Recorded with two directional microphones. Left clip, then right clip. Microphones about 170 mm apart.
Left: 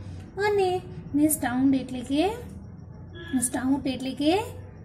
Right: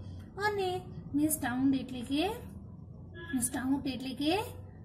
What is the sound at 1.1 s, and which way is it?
A woman's voice, 5° right (ahead or behind).